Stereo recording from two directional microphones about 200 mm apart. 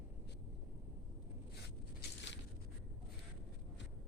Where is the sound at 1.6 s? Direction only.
60° left (ahead or behind).